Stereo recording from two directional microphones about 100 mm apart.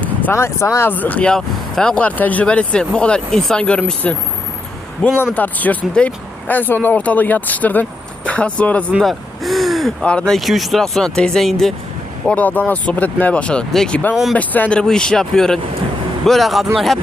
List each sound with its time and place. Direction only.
0.0 s a sound: 15° left (ahead or behind)
0.3 s speech: 30° left (ahead or behind); by 8.8 s 15° left (ahead or behind)
9.0 s gasp: centre (ahead or behind)
10.1 s speech: 10° left (ahead or behind)
12.3 s speech: 15° left (ahead or behind)